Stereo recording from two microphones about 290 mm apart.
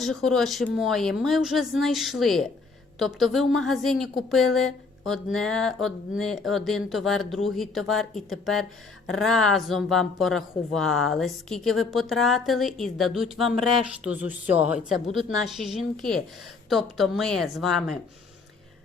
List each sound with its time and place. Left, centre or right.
0.0 s a woman's voice: centre